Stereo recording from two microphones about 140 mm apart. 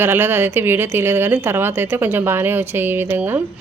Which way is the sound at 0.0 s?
15° right (ahead or behind).